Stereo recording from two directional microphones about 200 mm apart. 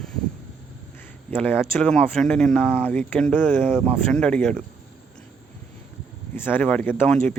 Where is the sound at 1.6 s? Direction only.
5° left (ahead or behind).